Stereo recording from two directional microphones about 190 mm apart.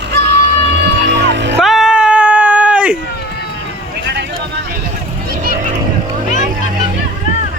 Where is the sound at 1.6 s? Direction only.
Centre (ahead or behind).